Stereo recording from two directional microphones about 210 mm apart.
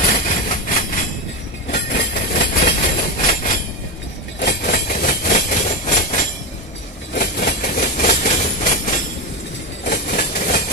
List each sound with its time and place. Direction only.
0.0 s vehicle: 40° left (ahead or behind)
2.1 s train: 35° left (ahead or behind)
4.4 s train: 50° left (ahead or behind)
7.2 s a sound: 50° left (ahead or behind)
9.8 s train: 45° left (ahead or behind)